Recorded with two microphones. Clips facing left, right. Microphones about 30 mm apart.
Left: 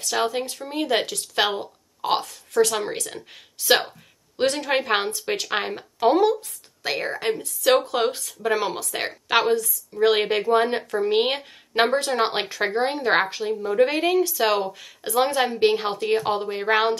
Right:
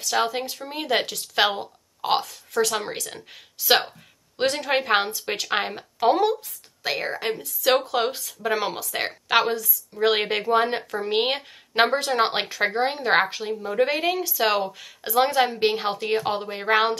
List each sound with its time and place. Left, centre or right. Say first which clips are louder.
0.2 s a woman's voice: left 1 dB; centre